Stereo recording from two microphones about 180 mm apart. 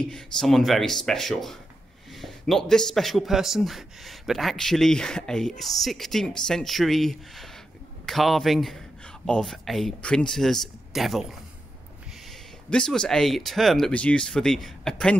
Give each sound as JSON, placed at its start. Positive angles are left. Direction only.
{"t": 0.0, "sound": "a man's voice", "side_deg": 5}
{"t": 12.6, "sound": "a man's voice", "side_deg": 5}